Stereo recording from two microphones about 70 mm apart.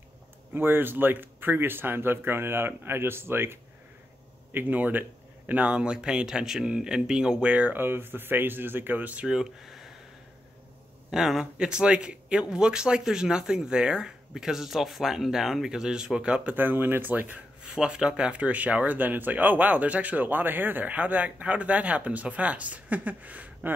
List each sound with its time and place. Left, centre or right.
0.5 s speech: right; by 7.5 s centre
7.5 s speech: right
9.2 s speech: centre
11.1 s speech: centre
16.5 s speech: right
17.7 s speech: centre